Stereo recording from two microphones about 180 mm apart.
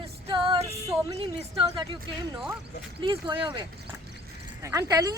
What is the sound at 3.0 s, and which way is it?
Speech, 25° right (ahead or behind).